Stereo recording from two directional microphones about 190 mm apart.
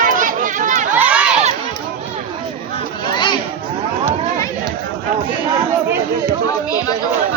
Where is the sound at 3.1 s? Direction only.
25° left (ahead or behind).